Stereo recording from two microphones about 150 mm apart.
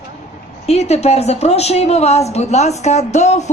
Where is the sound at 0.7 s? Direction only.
45° left (ahead or behind).